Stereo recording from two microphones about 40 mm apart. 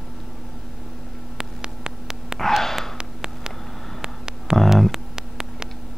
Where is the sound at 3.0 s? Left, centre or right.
Centre.